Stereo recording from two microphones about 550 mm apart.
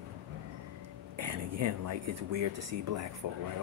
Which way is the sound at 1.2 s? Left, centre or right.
Right.